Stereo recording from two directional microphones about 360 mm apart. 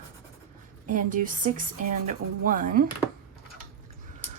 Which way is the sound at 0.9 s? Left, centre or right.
Right.